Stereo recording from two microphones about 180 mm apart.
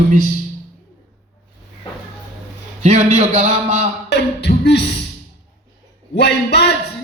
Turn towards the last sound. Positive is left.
turn(degrees=70)  # may be behind; listen again after turning